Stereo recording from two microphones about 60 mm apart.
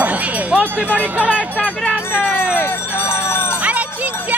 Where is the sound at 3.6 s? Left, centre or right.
Right.